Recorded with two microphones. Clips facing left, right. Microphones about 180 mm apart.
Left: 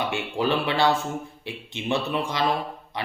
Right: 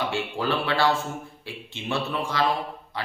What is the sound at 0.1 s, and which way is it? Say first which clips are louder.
A man's voice: left 2 dB; 20° left (ahead or behind).